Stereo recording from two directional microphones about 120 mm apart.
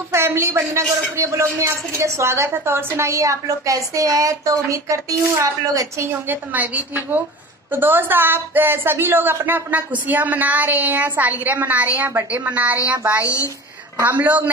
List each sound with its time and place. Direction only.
0.1 s a man's voice: 20° right (ahead or behind)
6.2 s a woman's voice: 15° right (ahead or behind)
13.2 s a woman's voice: 25° left (ahead or behind)
13.9 s a woman's voice: 15° right (ahead or behind)